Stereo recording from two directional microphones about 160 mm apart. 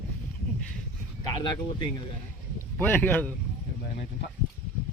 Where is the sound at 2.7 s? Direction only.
10° left (ahead or behind).